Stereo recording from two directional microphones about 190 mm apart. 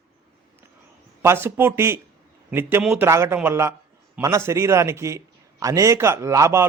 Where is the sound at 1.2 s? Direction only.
15° right (ahead or behind).